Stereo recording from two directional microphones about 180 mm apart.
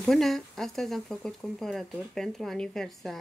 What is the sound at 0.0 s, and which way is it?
Speech, centre (ahead or behind).